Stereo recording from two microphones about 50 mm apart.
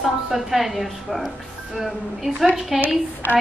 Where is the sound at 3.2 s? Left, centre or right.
Left.